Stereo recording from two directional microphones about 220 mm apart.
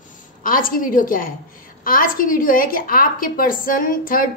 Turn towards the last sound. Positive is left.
turn(degrees=40)  # may be behind; listen again after turning